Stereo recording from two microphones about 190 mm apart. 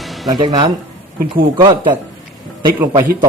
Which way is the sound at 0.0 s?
Centre (ahead or behind).